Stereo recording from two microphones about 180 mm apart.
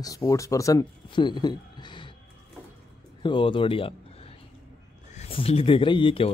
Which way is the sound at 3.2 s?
30° left (ahead or behind).